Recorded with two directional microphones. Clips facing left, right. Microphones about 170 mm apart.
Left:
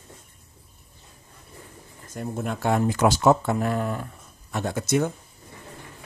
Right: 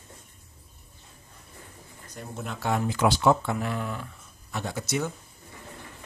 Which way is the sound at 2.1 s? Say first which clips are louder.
Left 7 dB; 50° left (ahead or behind).